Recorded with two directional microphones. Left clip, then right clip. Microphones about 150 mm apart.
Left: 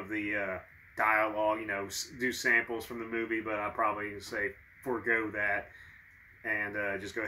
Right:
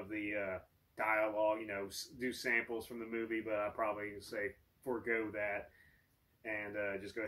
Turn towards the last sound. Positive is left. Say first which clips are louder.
# left 6 dB
turn(degrees=10)  # may be behind; listen again after turning